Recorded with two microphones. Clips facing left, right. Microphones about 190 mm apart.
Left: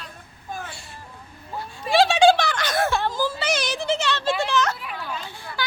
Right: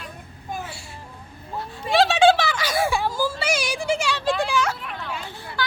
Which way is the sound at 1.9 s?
Centre (ahead or behind).